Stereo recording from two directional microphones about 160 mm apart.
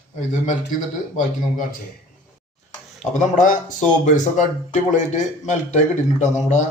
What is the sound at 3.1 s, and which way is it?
A man's voice, 55° left (ahead or behind).